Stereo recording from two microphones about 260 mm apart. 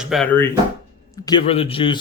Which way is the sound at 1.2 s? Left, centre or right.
Centre.